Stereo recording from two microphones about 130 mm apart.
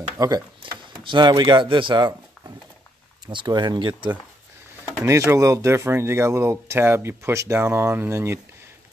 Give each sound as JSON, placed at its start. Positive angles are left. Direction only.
{"t": 0.2, "sound": "speech", "side_deg": -30}
{"t": 5.0, "sound": "speech", "side_deg": -20}